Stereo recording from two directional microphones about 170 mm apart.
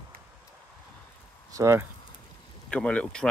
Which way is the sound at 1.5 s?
15° right (ahead or behind).